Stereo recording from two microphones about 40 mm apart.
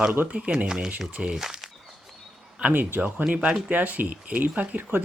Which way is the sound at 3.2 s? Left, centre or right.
Centre.